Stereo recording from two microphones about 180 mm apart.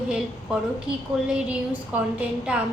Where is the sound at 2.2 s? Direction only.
5° right (ahead or behind).